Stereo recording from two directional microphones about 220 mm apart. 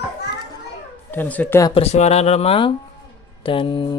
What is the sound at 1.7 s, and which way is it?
Speech, 30° left (ahead or behind).